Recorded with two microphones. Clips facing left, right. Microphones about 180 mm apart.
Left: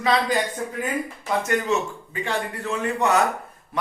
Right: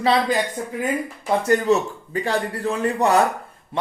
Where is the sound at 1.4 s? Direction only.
35° right (ahead or behind).